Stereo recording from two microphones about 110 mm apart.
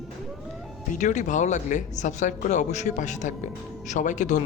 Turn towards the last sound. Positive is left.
turn(degrees=90)